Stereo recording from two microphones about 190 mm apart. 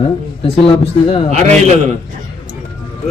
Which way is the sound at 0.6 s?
30° left (ahead or behind).